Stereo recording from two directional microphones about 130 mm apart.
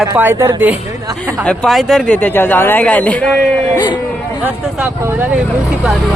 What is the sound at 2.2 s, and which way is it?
A man's voice, 15° left (ahead or behind).